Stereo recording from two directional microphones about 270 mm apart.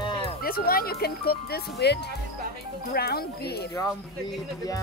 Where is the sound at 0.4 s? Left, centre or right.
Left.